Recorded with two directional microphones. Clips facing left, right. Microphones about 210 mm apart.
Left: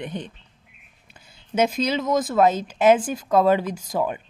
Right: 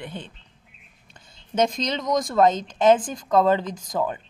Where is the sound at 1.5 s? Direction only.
5° left (ahead or behind).